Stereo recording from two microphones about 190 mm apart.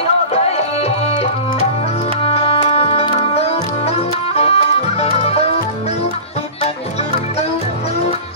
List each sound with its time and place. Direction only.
0.0 s music: 30° left (ahead or behind)
6.6 s music: 35° left (ahead or behind)